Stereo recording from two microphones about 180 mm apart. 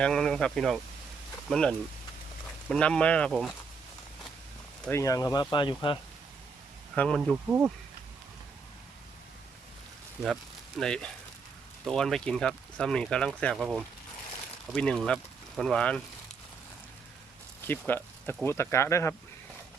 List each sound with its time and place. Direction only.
0.0 s speech: 5° left (ahead or behind)
4.9 s speech: 15° left (ahead or behind)
6.9 s speech: 5° left (ahead or behind)
7.2 s speech: 10° right (ahead or behind)
10.8 s speech: 5° left (ahead or behind)
17.7 s speech: 10° left (ahead or behind)